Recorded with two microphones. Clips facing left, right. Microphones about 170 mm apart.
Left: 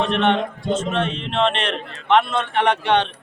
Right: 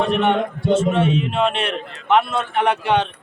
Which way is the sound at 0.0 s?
10° right (ahead or behind).